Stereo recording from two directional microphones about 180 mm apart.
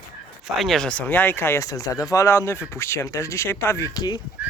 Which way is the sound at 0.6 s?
Centre (ahead or behind).